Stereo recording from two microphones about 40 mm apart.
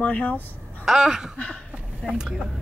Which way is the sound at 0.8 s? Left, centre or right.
Centre.